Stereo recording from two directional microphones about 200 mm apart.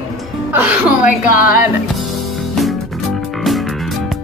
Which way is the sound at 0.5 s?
10° right (ahead or behind).